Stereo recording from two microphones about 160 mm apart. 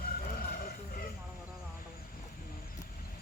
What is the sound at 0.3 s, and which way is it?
Vehicle, 60° left (ahead or behind).